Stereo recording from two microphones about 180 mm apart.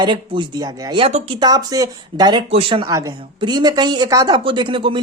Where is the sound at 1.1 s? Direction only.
40° right (ahead or behind).